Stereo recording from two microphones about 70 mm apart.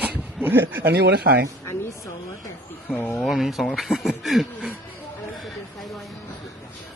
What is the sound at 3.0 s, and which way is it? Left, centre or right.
Speech, centre.